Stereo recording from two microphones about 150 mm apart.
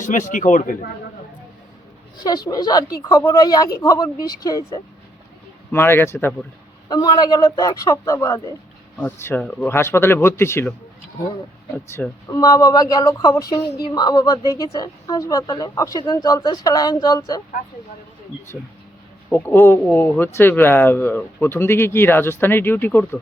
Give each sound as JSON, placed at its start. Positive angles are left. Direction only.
{"t": 0.0, "sound": "speech", "side_deg": 55}
{"t": 2.2, "sound": "speech", "side_deg": 25}
{"t": 5.7, "sound": "speech", "side_deg": 15}
{"t": 6.8, "sound": "speech", "side_deg": 25}
{"t": 12.3, "sound": "speech", "side_deg": 25}
{"t": 19.3, "sound": "speech", "side_deg": 15}